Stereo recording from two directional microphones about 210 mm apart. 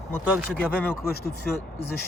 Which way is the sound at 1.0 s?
50° left (ahead or behind).